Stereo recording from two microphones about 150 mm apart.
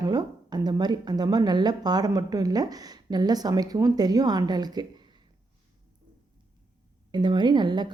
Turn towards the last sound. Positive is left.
turn(degrees=-30)  # may be behind; listen again after turning